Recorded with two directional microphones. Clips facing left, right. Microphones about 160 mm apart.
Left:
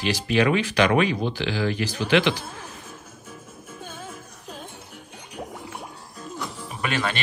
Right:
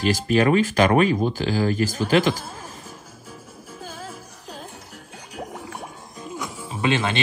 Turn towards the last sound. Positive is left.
turn(degrees=-20)  # may be behind; listen again after turning